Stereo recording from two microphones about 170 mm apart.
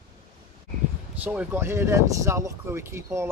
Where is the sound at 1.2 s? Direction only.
10° right (ahead or behind).